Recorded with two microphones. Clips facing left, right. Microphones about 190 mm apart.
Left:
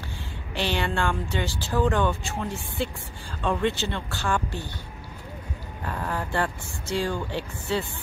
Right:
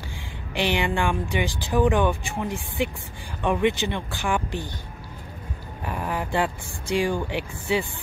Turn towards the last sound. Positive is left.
turn(degrees=-15)  # may be behind; listen again after turning